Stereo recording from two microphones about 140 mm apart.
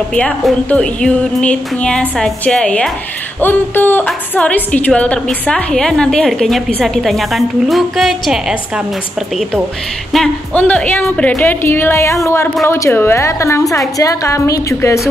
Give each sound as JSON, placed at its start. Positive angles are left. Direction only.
{"t": 0.1, "sound": "a woman's voice", "side_deg": 10}
{"t": 10.1, "sound": "a woman's voice", "side_deg": 5}